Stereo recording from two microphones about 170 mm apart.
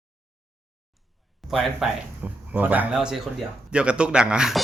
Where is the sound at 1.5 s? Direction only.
5° right (ahead or behind).